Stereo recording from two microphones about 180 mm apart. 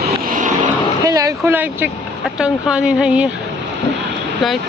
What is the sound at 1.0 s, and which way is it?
Speech, 20° right (ahead or behind).